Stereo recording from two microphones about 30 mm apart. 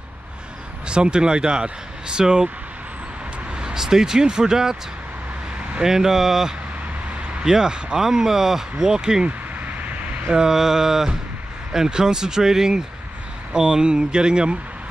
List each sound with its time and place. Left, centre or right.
0.8 s speech: right
3.7 s speech: centre
5.9 s a sound: centre
7.4 s speech: right
9.7 s vehicle: right
10.5 s a sound: centre
11.9 s speech: right